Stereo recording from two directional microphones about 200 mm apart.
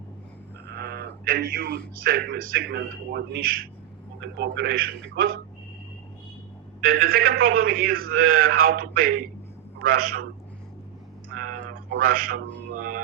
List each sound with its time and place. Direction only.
0.7 s a sound: 55° right (ahead or behind)
2.0 s a man's voice: 50° right (ahead or behind)
6.8 s a man's voice: 50° right (ahead or behind)
11.9 s a man's voice: 45° right (ahead or behind)